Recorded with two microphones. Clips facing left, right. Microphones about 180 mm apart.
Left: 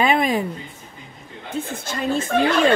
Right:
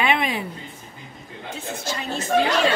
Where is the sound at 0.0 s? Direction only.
40° left (ahead or behind).